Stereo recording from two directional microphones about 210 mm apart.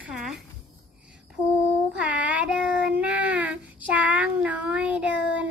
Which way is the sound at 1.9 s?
5° right (ahead or behind).